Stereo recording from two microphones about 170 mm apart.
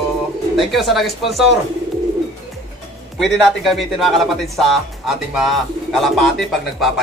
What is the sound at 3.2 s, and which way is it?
Speech, centre (ahead or behind).